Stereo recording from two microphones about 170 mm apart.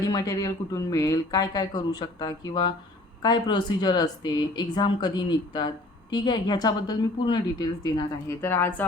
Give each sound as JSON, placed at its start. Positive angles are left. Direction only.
{"t": 0.1, "sound": "speech", "side_deg": 20}
{"t": 8.4, "sound": "speech", "side_deg": 15}